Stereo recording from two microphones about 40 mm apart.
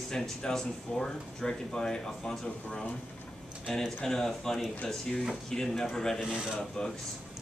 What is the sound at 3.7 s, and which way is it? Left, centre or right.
A man's voice, centre.